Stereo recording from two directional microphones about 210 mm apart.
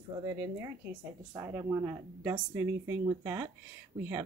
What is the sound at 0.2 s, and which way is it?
Speech, 15° right (ahead or behind).